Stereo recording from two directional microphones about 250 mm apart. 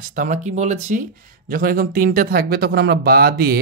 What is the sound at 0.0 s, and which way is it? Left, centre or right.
Speech, right.